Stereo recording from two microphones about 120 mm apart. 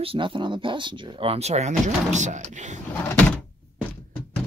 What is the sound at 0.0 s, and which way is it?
Speech, 50° right (ahead or behind).